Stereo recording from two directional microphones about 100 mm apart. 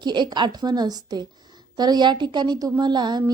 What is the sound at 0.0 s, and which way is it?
A woman's voice, 50° right (ahead or behind).